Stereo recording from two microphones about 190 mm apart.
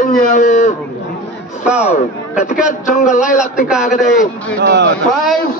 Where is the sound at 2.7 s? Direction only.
40° left (ahead or behind).